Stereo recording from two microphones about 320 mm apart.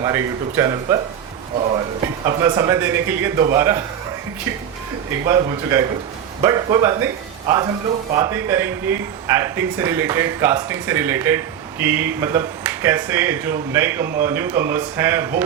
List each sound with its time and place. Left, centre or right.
0.0 s a man's voice: centre
5.2 s a man's voice: centre